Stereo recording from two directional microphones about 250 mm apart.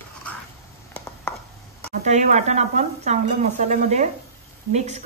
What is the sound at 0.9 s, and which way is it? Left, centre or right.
Chopping, centre.